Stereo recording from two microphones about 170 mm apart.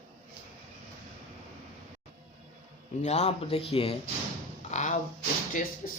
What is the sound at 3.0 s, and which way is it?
Speech, 40° left (ahead or behind).